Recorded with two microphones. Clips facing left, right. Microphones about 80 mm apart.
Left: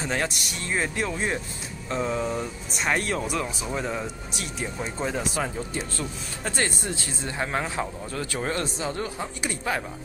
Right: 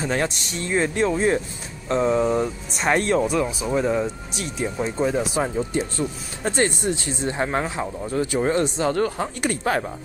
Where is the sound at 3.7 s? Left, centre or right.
Centre.